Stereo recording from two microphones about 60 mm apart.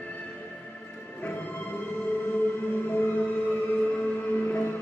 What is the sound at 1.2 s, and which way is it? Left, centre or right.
Music, left.